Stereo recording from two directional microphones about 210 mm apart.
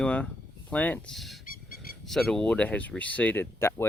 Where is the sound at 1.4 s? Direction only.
45° left (ahead or behind).